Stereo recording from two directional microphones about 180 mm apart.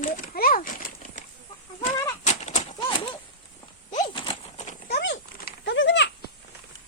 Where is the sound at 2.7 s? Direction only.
30° left (ahead or behind).